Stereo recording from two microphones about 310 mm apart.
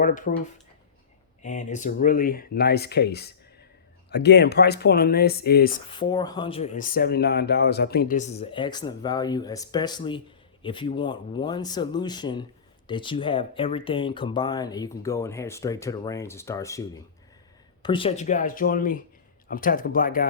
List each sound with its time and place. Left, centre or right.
0.0 s speech: left
1.4 s speech: left
5.9 s speech: centre